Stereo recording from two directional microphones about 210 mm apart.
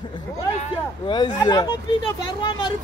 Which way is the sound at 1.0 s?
20° left (ahead or behind).